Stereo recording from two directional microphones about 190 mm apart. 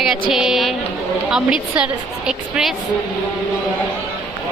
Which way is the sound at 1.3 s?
5° right (ahead or behind).